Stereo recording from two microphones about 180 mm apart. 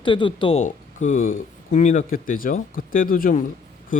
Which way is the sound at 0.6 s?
45° left (ahead or behind).